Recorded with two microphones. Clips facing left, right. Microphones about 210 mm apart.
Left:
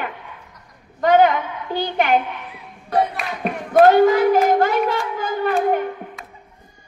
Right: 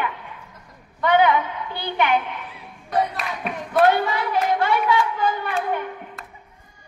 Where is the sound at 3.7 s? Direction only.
45° left (ahead or behind).